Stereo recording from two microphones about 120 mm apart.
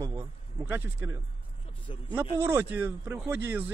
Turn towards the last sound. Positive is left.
turn(degrees=-15)  # may be behind; listen again after turning